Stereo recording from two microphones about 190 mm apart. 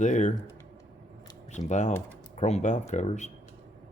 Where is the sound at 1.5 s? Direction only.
40° left (ahead or behind).